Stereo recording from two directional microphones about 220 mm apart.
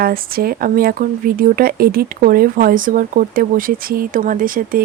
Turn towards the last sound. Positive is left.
turn(degrees=-40)  # may be behind; listen again after turning